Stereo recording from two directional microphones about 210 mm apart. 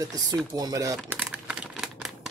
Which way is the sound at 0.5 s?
15° right (ahead or behind).